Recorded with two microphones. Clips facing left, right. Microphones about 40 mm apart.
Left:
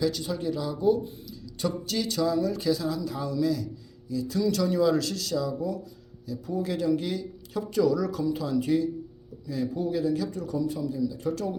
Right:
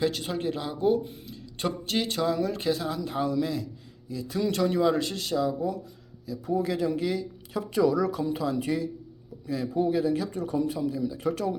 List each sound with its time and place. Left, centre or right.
0.0 s a woman's voice: right